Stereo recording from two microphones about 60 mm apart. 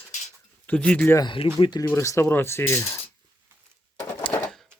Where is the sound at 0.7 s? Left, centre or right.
Centre.